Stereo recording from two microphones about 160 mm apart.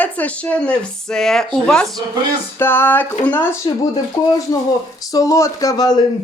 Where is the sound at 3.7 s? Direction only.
30° left (ahead or behind).